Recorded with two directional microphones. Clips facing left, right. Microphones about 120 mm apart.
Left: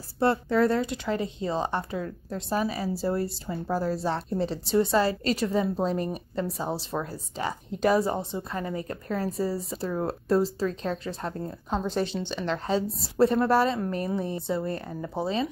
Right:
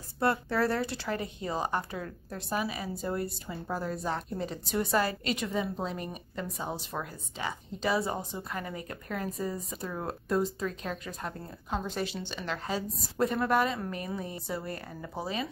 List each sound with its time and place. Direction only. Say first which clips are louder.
0.2 s speech: left 5 dB; 25° left (ahead or behind)
2.5 s a woman's voice: left 5 dB; 35° left (ahead or behind)
8.2 s a woman's voice: left 5 dB; 25° left (ahead or behind)